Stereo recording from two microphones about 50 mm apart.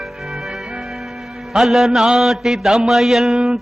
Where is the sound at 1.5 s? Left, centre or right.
Centre.